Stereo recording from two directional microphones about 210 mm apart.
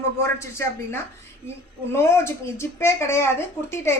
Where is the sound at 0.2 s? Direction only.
10° left (ahead or behind).